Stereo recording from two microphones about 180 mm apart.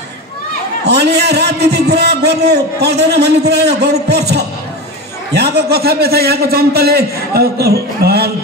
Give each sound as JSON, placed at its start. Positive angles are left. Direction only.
{"t": 0.8, "sound": "a man's voice", "side_deg": -65}